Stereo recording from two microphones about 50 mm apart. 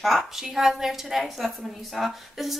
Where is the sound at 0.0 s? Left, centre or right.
Centre.